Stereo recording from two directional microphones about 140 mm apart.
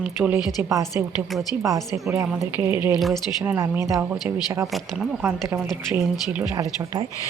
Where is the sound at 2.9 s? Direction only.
Centre (ahead or behind).